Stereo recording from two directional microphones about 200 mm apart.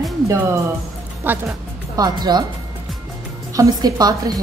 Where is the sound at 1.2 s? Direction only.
15° right (ahead or behind).